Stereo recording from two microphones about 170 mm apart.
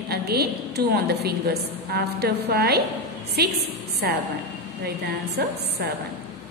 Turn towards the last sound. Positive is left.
turn(degrees=-75)  # may be behind; listen again after turning